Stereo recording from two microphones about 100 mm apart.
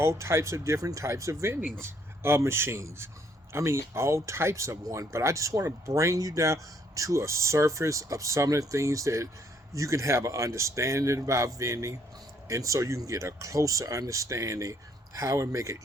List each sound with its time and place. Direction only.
0.0 s speech: 25° right (ahead or behind)